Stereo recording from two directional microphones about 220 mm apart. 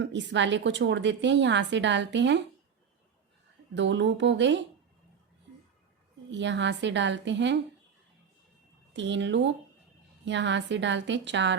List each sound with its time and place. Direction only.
0.0 s a woman's voice: 55° right (ahead or behind)
3.8 s a woman's voice: 55° right (ahead or behind)
6.3 s a woman's voice: 55° right (ahead or behind)
8.9 s a woman's voice: 55° right (ahead or behind)